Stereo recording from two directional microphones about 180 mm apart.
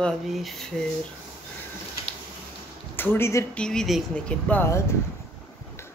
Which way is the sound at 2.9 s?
10° left (ahead or behind).